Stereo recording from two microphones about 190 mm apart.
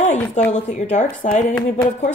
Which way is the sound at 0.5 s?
35° left (ahead or behind).